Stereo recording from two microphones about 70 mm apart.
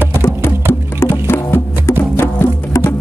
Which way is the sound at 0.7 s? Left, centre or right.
Left.